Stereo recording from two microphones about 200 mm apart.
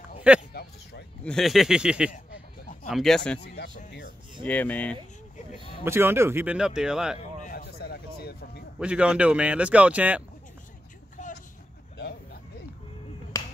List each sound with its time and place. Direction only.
0.5 s a sound: 50° left (ahead or behind)
1.2 s a man's voice: centre (ahead or behind)
3.4 s speech: 55° left (ahead or behind)
4.5 s speech: 10° left (ahead or behind)
5.9 s speech: 10° right (ahead or behind)
7.2 s a sound: 45° left (ahead or behind)
8.7 s speech: 5° right (ahead or behind)